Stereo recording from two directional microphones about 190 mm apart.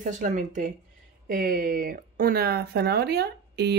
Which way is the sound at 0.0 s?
40° right (ahead or behind).